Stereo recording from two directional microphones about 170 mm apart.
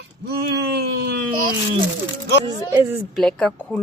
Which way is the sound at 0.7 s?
70° right (ahead or behind).